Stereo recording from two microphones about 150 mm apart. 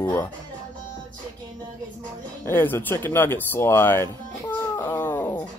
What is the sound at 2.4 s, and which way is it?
Speech, 15° left (ahead or behind).